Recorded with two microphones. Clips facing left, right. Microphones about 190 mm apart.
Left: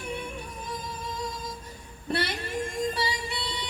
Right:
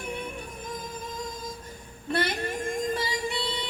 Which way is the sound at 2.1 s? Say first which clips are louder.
Right 2 dB; 50° right (ahead or behind).